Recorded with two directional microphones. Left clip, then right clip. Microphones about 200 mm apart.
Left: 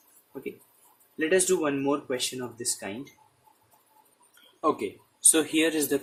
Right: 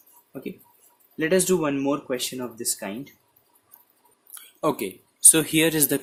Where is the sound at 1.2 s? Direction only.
45° right (ahead or behind).